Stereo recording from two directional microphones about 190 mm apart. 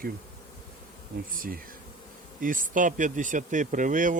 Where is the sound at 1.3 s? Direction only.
45° right (ahead or behind).